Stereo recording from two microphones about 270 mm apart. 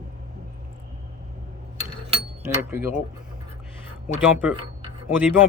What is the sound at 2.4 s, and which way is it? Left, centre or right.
Speech, centre.